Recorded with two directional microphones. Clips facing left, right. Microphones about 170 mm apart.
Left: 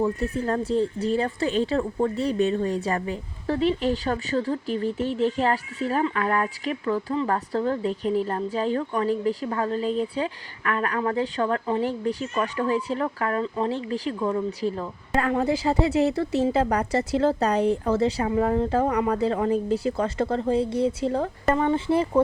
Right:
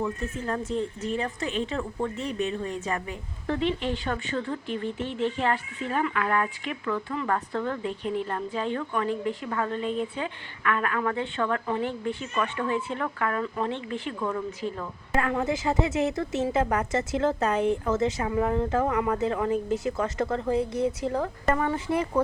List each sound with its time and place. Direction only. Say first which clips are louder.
0.0 s speech: left 6 dB; 35° left (ahead or behind)